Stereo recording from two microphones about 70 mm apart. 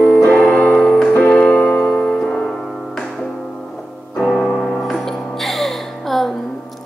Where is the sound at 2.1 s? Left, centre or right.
Centre.